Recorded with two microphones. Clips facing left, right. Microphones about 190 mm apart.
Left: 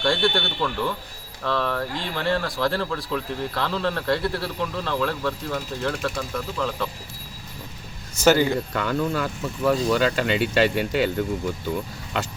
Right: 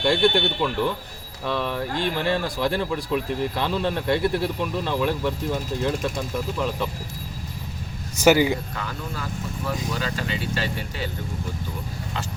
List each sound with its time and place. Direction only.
0.0 s speech: 20° right (ahead or behind)
8.2 s speech: 15° right (ahead or behind)
8.7 s speech: 70° left (ahead or behind)